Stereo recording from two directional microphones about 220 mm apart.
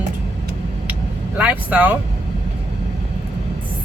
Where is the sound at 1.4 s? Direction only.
5° right (ahead or behind).